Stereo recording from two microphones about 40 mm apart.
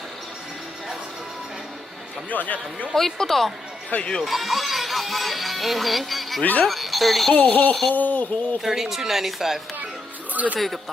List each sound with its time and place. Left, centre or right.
2.3 s speech: left
2.9 s a woman's voice: centre
3.8 s speech: left
4.2 s speech: centre
6.4 s speech: left
6.7 s speech: centre
7.3 s speech: left
8.6 s speech: centre
10.3 s speech: right